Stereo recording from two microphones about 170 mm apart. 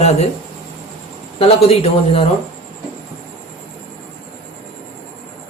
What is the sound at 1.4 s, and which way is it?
Speech, 35° left (ahead or behind).